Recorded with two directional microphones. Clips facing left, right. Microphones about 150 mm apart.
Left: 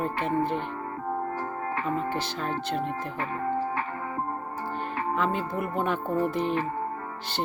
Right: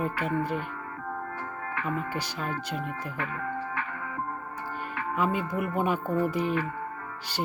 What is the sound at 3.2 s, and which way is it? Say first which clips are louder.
Music: left 5 dB; 35° left (ahead or behind).